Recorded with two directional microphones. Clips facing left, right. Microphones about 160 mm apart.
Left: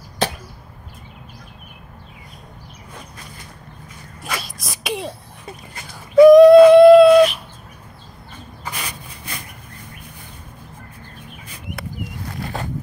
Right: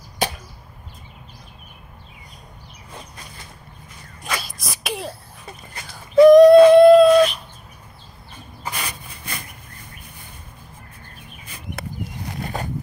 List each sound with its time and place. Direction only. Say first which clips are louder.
0.2 s chop: left 2 dB; 10° right (ahead or behind)
4.2 s sneeze: even; centre (ahead or behind)
6.2 s a sound: left 2 dB; centre (ahead or behind)
12.3 s wild animals: even; 15° right (ahead or behind)